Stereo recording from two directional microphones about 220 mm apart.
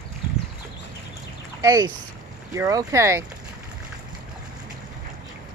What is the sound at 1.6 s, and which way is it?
Speech, 15° right (ahead or behind).